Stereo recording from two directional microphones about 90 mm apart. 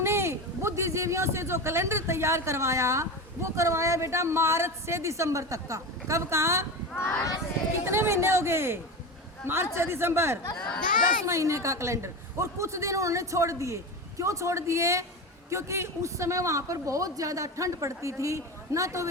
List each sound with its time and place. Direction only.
0.0 s a man's voice: 30° right (ahead or behind)
6.9 s speech: 25° left (ahead or behind)
7.9 s speech: 30° right (ahead or behind)
10.6 s a child's voice: 10° left (ahead or behind)
11.3 s a woman's voice: 35° right (ahead or behind)